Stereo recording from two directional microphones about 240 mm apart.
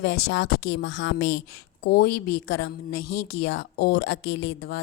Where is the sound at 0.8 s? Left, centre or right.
Left.